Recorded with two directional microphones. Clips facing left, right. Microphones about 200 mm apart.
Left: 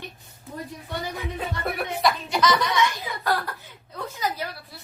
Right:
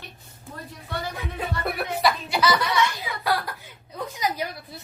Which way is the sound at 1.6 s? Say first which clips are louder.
Even; centre (ahead or behind).